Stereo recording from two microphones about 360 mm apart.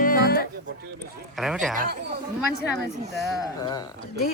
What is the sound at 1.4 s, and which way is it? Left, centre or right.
Speech, centre.